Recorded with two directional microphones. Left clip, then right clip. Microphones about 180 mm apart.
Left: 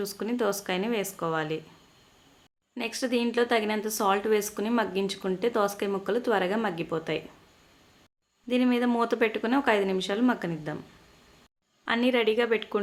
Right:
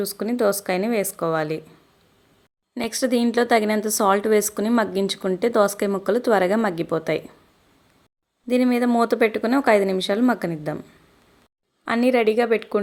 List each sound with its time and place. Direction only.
0.0 s speech: 30° right (ahead or behind)
2.7 s speech: 40° right (ahead or behind)
8.4 s speech: 30° right (ahead or behind)
11.9 s speech: 30° right (ahead or behind)